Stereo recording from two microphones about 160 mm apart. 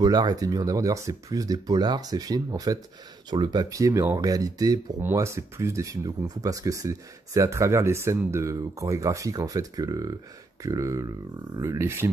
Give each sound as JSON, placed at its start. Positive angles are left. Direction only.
{"t": 0.0, "sound": "speech", "side_deg": -25}